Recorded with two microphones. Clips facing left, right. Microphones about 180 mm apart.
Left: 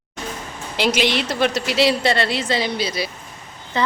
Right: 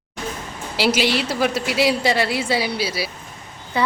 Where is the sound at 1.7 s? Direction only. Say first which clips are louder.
Left 1 dB; 70° left (ahead or behind).